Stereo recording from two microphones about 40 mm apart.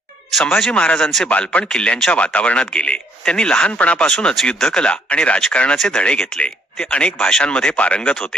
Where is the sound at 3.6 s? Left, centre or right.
Left.